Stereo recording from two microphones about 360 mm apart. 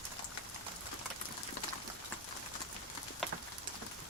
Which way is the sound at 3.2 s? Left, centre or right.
Centre.